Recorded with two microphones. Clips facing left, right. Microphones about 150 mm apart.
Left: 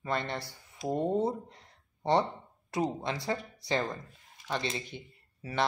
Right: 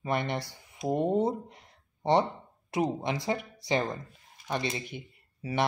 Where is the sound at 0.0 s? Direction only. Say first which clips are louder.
Right 3 dB; 15° right (ahead or behind).